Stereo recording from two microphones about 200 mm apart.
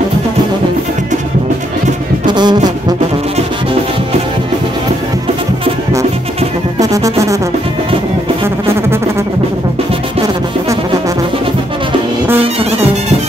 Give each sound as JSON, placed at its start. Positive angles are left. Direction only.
{"t": 2.2, "sound": "music", "side_deg": -20}
{"t": 6.8, "sound": "music", "side_deg": -15}